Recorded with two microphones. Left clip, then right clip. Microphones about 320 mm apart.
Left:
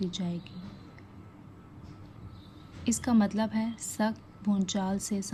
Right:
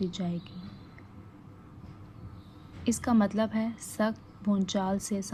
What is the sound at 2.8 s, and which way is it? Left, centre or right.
A woman's voice, centre.